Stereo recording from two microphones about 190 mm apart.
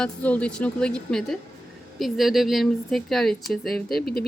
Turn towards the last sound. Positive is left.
turn(degrees=55)  # may be behind; listen again after turning